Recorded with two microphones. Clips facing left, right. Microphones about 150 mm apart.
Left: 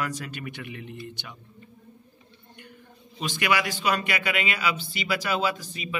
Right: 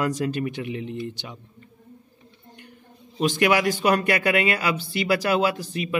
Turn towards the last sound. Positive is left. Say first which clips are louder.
# right 7 dB
turn(degrees=-60)  # may be behind; listen again after turning